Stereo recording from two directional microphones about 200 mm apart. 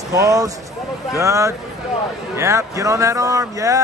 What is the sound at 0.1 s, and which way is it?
A man's voice, 15° right (ahead or behind).